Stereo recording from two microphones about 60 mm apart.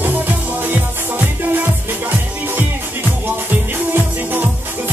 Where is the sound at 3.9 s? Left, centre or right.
Right.